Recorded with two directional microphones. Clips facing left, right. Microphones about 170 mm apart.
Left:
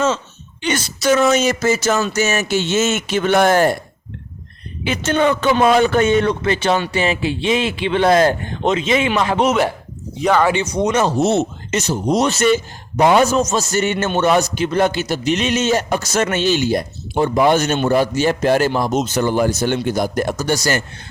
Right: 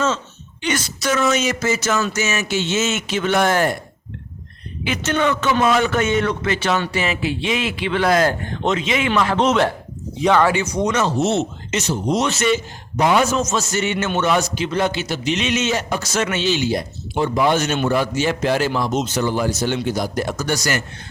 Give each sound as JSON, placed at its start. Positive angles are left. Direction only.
{"t": 0.6, "sound": "a man's voice", "side_deg": 30}
{"t": 4.9, "sound": "a man's voice", "side_deg": 30}
{"t": 10.4, "sound": "a man's voice", "side_deg": 20}
{"t": 11.0, "sound": "a man's voice", "side_deg": 40}
{"t": 20.3, "sound": "a man's voice", "side_deg": 30}